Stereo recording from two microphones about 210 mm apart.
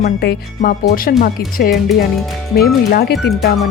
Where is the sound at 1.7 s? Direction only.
Centre (ahead or behind).